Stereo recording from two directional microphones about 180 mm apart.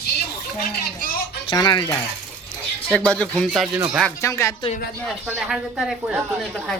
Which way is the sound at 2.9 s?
5° left (ahead or behind).